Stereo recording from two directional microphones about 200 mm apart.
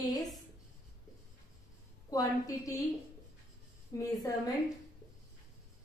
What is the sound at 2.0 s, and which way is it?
Speech, 15° left (ahead or behind).